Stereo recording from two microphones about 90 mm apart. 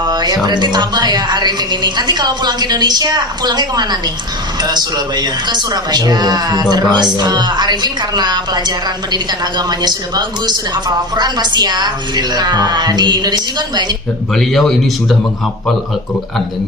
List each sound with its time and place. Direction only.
0.0 s a woman's voice: 50° right (ahead or behind)
14.3 s speech: 5° left (ahead or behind)